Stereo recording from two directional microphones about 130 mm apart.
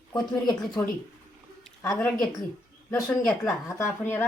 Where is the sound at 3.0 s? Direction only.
25° left (ahead or behind).